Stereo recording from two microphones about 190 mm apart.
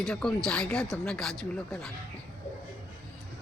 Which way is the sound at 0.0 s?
5° left (ahead or behind).